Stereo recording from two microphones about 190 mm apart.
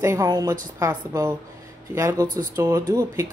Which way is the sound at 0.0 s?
15° right (ahead or behind).